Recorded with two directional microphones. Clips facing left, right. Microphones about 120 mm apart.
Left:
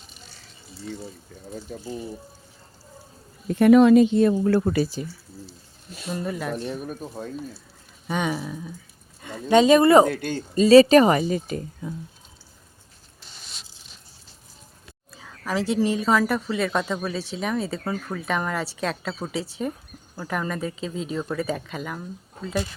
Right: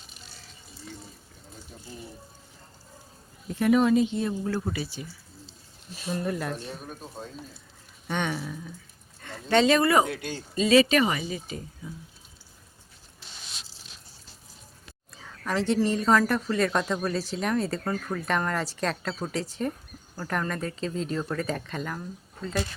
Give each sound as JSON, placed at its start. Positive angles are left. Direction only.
{"t": 1.7, "sound": "speech", "side_deg": 55}
{"t": 3.4, "sound": "speech", "side_deg": 60}
{"t": 4.8, "sound": "speech", "side_deg": 40}
{"t": 6.2, "sound": "speech", "side_deg": 0}
{"t": 6.7, "sound": "speech", "side_deg": 80}
{"t": 8.0, "sound": "speech", "side_deg": 10}
{"t": 10.1, "sound": "speech", "side_deg": 50}
{"t": 15.1, "sound": "speech", "side_deg": 0}